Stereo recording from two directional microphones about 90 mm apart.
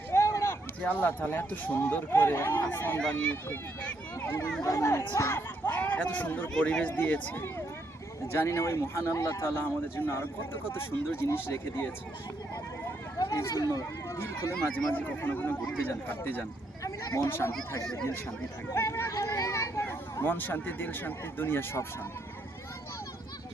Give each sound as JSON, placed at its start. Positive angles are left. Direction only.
{"t": 0.1, "sound": "a sound", "side_deg": 35}
{"t": 0.8, "sound": "speech", "side_deg": 20}
{"t": 3.0, "sound": "speech", "side_deg": 10}
{"t": 4.6, "sound": "speech", "side_deg": 30}
{"t": 6.5, "sound": "speech", "side_deg": 10}
{"t": 13.5, "sound": "speech", "side_deg": 40}
{"t": 14.9, "sound": "speech", "side_deg": 20}
{"t": 16.8, "sound": "a sound", "side_deg": 40}
{"t": 17.2, "sound": "speech", "side_deg": 25}
{"t": 18.7, "sound": "speech", "side_deg": 30}
{"t": 19.1, "sound": "a sound", "side_deg": 40}
{"t": 20.2, "sound": "speech", "side_deg": 20}